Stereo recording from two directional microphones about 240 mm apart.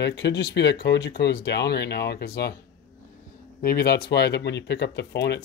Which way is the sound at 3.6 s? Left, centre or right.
Left.